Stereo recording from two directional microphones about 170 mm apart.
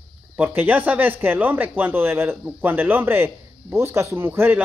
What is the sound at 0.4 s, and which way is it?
Speech, 10° right (ahead or behind).